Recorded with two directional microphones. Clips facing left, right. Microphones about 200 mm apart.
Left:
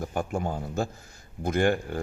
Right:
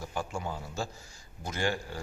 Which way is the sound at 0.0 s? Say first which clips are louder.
Left 6 dB; 55° left (ahead or behind).